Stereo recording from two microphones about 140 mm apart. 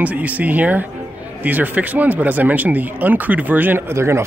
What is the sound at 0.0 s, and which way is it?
Speech, 10° right (ahead or behind).